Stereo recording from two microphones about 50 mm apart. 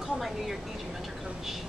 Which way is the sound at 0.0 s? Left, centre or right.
Centre.